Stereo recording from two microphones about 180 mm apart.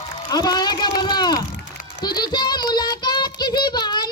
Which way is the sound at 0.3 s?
20° left (ahead or behind).